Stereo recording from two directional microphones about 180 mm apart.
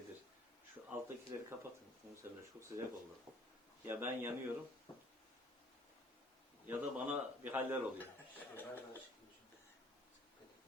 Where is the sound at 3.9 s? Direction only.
10° right (ahead or behind).